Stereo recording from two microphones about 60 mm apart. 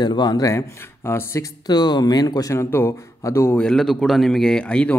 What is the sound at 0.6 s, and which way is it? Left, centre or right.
Speech, left.